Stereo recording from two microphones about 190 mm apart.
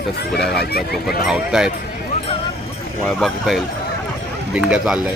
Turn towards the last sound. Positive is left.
turn(degrees=-5)  # may be behind; listen again after turning